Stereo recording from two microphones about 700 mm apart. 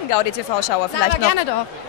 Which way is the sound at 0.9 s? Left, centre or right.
Left.